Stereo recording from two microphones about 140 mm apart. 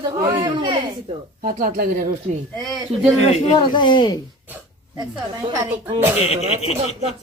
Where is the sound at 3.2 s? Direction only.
50° left (ahead or behind).